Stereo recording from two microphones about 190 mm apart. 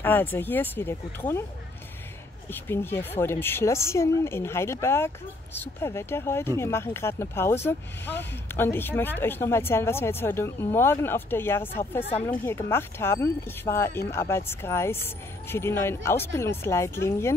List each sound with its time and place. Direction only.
0.0 s a woman's voice: 10° left (ahead or behind)
2.5 s a woman's voice: 10° left (ahead or behind)
12.0 s speech: 35° left (ahead or behind)
12.4 s a woman's voice: 15° left (ahead or behind)